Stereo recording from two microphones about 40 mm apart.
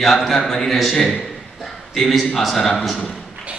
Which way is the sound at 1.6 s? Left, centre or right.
Centre.